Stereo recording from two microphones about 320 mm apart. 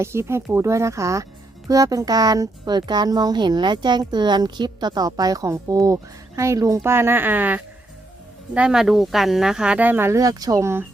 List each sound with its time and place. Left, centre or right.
0.0 s speech: centre